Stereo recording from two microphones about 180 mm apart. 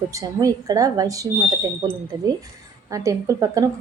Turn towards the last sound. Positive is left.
turn(degrees=-20)  # may be behind; listen again after turning